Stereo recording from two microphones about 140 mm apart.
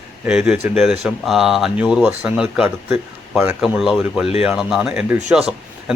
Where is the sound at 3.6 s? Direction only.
5° right (ahead or behind).